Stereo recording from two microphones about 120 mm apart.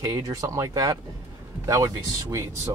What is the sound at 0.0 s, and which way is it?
Speech, 30° right (ahead or behind).